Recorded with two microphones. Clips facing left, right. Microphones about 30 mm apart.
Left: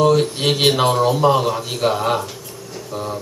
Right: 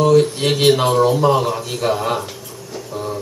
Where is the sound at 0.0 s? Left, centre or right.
Centre.